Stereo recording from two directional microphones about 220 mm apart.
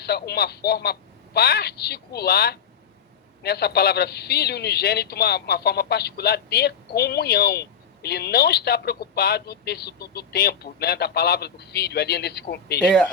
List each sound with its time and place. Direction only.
0.0 s a man's voice: 45° left (ahead or behind)
12.8 s speech: 5° left (ahead or behind)